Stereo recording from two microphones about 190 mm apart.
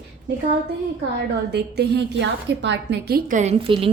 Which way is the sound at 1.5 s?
60° right (ahead or behind).